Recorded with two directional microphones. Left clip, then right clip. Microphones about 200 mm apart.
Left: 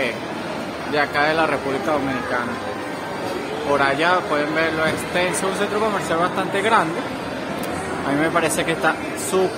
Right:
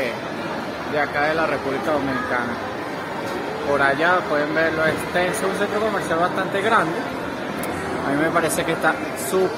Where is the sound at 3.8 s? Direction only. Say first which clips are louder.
Right 1 dB; 5° left (ahead or behind).